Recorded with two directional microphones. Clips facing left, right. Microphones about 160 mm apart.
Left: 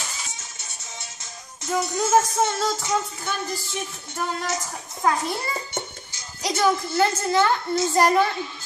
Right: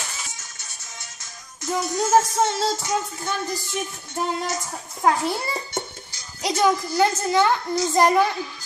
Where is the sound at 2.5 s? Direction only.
30° right (ahead or behind).